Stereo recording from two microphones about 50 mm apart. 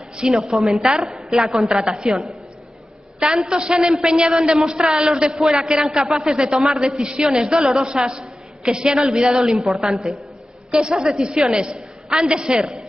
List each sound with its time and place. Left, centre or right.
0.2 s a woman's voice: centre
0.6 s a woman's voice: centre
1.9 s a woman's voice: centre
3.4 s a woman's voice: centre
10.7 s a woman's voice: centre